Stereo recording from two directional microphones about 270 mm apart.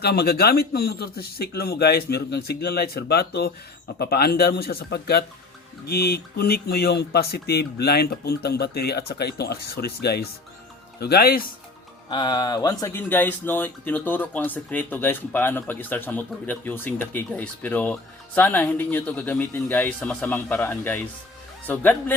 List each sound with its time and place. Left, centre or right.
0.0 s speech: left
12.1 s speech: centre